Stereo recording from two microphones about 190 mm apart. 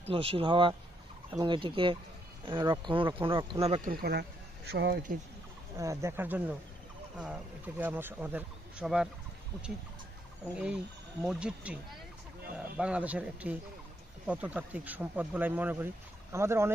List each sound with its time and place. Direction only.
0.1 s speech: 30° right (ahead or behind)
3.6 s speech: 35° right (ahead or behind)
3.9 s speech: 55° right (ahead or behind)
5.8 s speech: 15° right (ahead or behind)
10.5 s speech: 5° right (ahead or behind)